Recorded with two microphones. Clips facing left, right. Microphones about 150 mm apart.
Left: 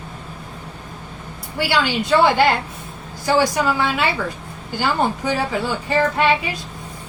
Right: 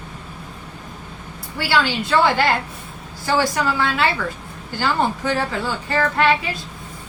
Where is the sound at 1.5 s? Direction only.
15° left (ahead or behind).